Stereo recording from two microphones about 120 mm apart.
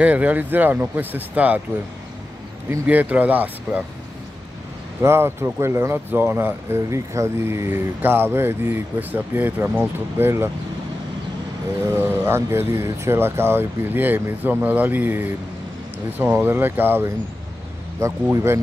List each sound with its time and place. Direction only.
0.0 s speech: 10° right (ahead or behind)
2.9 s speech: 15° right (ahead or behind)
5.0 s speech: 20° right (ahead or behind)
11.9 s speech: 20° right (ahead or behind)